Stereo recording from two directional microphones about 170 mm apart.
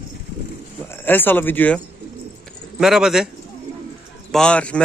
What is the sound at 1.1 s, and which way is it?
Speech, 10° left (ahead or behind).